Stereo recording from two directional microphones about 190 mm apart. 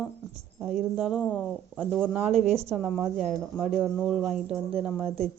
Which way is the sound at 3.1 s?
Centre (ahead or behind).